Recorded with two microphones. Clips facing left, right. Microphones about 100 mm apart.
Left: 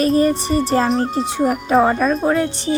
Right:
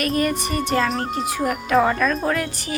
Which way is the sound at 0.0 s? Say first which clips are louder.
Left 6 dB; 30° left (ahead or behind).